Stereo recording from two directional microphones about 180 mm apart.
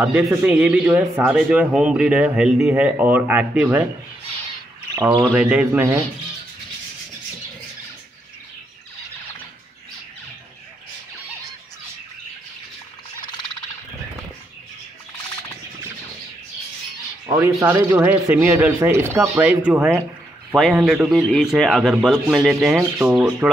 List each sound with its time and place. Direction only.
0.0 s speech: 10° right (ahead or behind)
5.3 s speech: 5° right (ahead or behind)
17.3 s speech: 15° right (ahead or behind)
20.5 s a man's voice: centre (ahead or behind)